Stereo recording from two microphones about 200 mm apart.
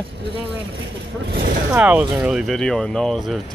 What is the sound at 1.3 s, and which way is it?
Speech, 50° right (ahead or behind).